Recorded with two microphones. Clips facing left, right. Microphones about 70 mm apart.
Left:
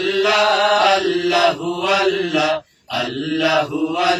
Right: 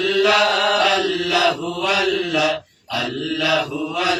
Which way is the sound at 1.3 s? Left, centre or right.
Left.